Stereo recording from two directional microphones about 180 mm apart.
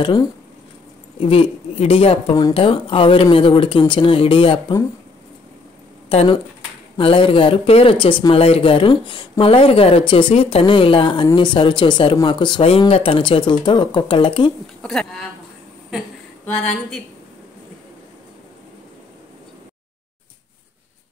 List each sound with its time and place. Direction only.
0.0 s speech: 25° left (ahead or behind)
6.0 s speech: 30° left (ahead or behind)
14.8 s speech: 5° left (ahead or behind)